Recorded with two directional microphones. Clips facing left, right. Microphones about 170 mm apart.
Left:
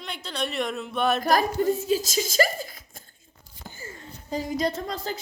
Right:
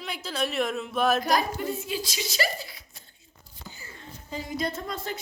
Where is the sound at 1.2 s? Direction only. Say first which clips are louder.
Left 4 dB; 40° left (ahead or behind).